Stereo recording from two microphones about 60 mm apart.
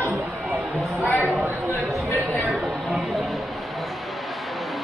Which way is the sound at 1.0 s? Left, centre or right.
Left.